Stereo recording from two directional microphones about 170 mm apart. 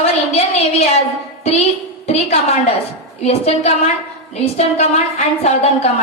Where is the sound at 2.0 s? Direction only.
40° left (ahead or behind).